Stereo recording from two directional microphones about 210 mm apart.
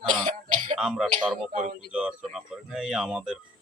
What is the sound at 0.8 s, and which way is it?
Speech, 5° right (ahead or behind).